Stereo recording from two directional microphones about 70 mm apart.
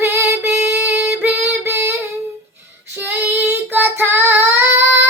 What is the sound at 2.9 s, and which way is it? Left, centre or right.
Child singing, right.